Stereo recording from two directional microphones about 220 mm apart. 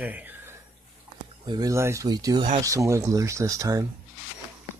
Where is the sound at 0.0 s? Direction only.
10° right (ahead or behind).